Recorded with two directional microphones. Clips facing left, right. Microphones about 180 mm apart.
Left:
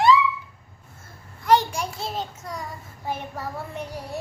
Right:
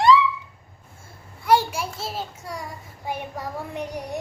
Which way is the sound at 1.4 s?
10° right (ahead or behind).